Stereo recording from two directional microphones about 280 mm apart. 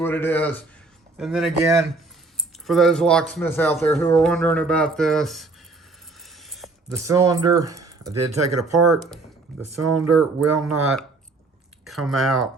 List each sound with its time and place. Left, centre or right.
0.0 s a man's voice: centre
6.2 s mechanisms: centre
6.8 s speech: centre
8.4 s speech: right
9.9 s speech: centre